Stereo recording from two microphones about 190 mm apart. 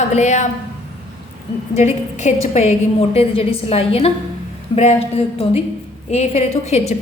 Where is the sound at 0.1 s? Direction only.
40° left (ahead or behind).